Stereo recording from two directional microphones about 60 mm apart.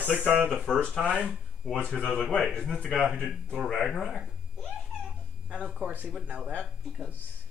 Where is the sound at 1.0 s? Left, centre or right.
Right.